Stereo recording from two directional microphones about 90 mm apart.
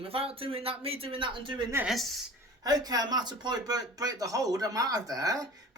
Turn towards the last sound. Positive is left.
turn(degrees=-40)  # may be behind; listen again after turning